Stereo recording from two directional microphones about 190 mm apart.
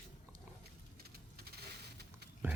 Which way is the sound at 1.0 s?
55° right (ahead or behind).